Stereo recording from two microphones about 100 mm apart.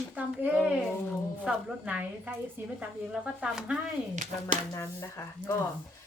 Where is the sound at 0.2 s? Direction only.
10° right (ahead or behind).